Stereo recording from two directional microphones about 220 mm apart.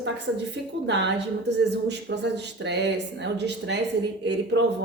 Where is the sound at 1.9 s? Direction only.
50° right (ahead or behind).